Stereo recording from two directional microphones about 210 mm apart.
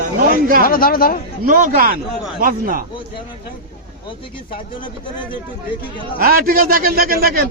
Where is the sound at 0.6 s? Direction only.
45° left (ahead or behind).